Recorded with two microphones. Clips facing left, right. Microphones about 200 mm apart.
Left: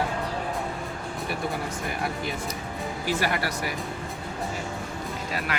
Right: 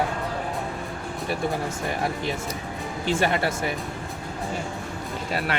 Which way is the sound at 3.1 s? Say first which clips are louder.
Right 4 dB; 25° right (ahead or behind).